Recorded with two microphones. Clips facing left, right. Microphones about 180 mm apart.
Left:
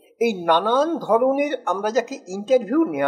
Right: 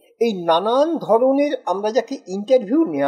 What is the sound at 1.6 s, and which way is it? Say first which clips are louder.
Speech: right 3 dB; 15° right (ahead or behind).